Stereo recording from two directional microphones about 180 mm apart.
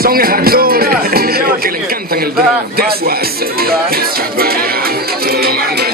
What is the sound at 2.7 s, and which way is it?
Music, 55° right (ahead or behind).